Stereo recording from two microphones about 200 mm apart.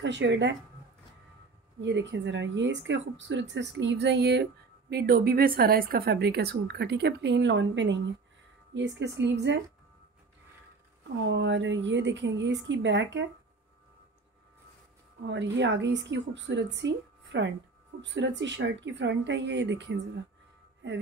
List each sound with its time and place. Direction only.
0.0 s speech: 65° right (ahead or behind)
1.8 s speech: 65° right (ahead or behind)
11.2 s speech: 65° right (ahead or behind)
15.2 s speech: 60° right (ahead or behind)